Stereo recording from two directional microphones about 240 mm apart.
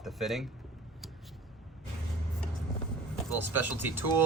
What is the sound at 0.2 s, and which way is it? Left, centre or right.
Speech, centre.